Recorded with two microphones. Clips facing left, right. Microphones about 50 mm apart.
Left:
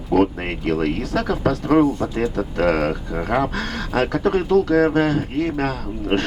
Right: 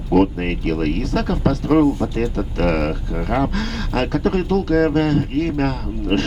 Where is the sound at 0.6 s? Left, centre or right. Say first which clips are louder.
Left 1 dB; left.